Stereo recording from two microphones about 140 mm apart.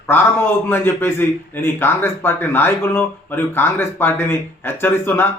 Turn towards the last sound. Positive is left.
turn(degrees=15)  # may be behind; listen again after turning